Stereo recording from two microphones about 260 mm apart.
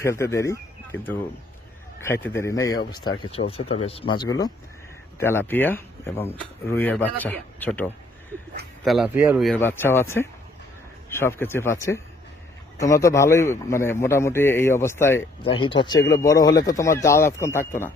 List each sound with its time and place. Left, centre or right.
0.0 s speech: centre
15.4 s speech: centre